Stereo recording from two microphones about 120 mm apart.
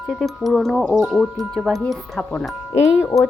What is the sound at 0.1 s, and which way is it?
Speech, centre (ahead or behind).